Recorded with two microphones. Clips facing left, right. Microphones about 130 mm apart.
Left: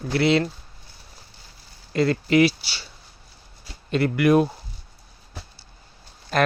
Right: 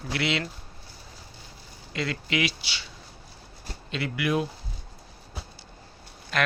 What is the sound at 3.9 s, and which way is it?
Speech, 50° left (ahead or behind).